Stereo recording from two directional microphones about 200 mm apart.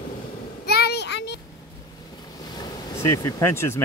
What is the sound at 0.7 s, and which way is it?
Child singing, 55° left (ahead or behind).